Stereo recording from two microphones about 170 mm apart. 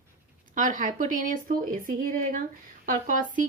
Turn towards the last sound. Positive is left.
turn(degrees=-50)  # may be behind; listen again after turning